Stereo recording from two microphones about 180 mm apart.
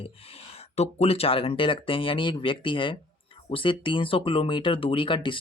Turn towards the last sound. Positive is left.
turn(degrees=25)  # may be behind; listen again after turning